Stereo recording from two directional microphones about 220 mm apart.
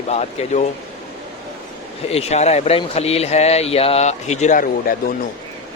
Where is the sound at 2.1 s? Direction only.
30° left (ahead or behind).